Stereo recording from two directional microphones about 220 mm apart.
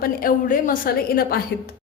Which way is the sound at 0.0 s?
40° left (ahead or behind).